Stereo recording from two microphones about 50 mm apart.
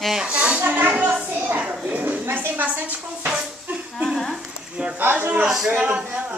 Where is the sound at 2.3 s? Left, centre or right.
Right.